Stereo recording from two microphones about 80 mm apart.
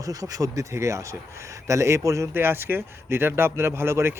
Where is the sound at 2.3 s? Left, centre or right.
Right.